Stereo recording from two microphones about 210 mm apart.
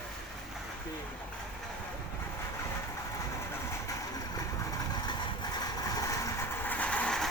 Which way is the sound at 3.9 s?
15° left (ahead or behind).